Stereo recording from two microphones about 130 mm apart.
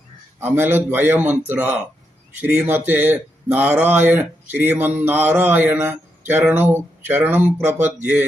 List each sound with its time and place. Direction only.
0.3 s speech: 15° right (ahead or behind)